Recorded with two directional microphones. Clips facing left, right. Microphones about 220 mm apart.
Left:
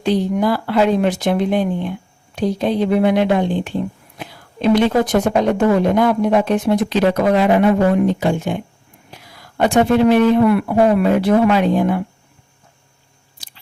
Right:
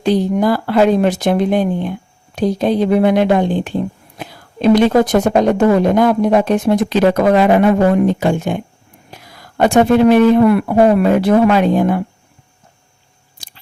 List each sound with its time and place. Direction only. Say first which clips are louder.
0.0 s speech: right 3 dB; 40° right (ahead or behind)
13.4 s biting: right 2 dB; 45° right (ahead or behind)